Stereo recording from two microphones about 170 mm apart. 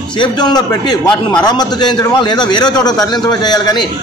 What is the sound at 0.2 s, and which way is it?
A man's voice, 25° left (ahead or behind).